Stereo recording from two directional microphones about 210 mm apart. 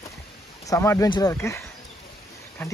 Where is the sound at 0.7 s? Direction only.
15° left (ahead or behind).